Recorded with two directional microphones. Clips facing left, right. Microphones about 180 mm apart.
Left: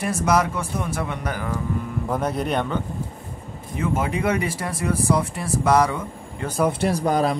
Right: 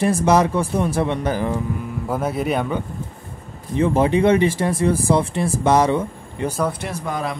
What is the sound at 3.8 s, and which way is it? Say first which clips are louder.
Speech: right 7 dB; 30° right (ahead or behind).